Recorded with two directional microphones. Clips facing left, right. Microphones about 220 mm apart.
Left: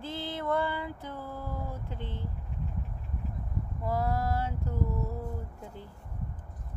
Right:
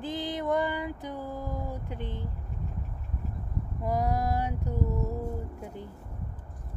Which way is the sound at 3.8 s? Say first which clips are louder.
Right 2 dB; 15° right (ahead or behind).